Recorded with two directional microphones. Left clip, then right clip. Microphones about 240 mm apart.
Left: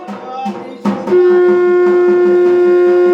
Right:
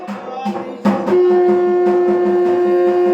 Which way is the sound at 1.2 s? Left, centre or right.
Centre.